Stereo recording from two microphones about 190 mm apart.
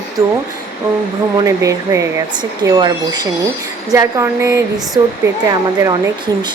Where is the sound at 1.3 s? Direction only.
15° right (ahead or behind).